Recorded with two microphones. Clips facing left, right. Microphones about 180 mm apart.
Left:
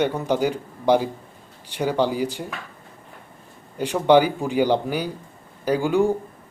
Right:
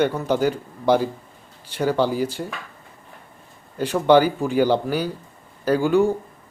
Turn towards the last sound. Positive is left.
turn(degrees=15)  # may be behind; listen again after turning